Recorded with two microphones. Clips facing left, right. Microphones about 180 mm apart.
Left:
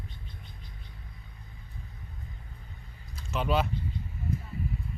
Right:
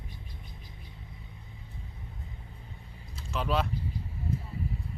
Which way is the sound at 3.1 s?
Centre (ahead or behind).